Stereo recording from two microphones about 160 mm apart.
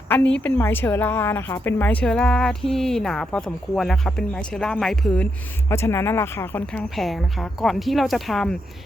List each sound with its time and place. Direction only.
0.3 s speech: 10° left (ahead or behind)